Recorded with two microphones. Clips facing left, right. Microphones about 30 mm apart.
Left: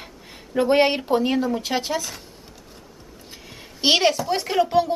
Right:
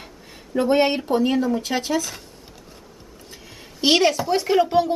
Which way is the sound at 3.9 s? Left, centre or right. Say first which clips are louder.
Right 1 dB; centre.